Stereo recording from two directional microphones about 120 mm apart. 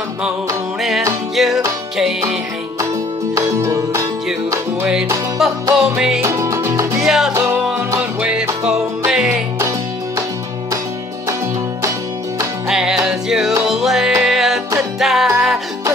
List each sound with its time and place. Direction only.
1.3 s music: centre (ahead or behind)
3.3 s music: 30° right (ahead or behind)
5.4 s music: 5° right (ahead or behind)
6.2 s music: 25° right (ahead or behind)
7.0 s music: 5° right (ahead or behind)
9.6 s music: 25° right (ahead or behind)
12.6 s music: 5° right (ahead or behind)